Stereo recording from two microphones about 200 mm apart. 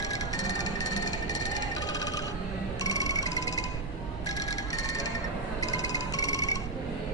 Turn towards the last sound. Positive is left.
turn(degrees=15)  # may be behind; listen again after turning